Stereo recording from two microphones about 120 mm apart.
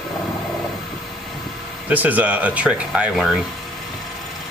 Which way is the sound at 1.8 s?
15° right (ahead or behind).